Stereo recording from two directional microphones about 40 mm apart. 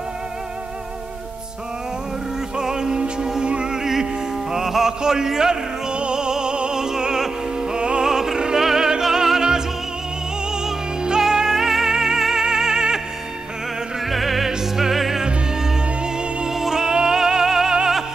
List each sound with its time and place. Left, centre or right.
2.5 s music: centre
14.0 s music: centre
15.2 s music: right